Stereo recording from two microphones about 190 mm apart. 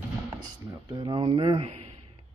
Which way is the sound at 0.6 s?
20° right (ahead or behind).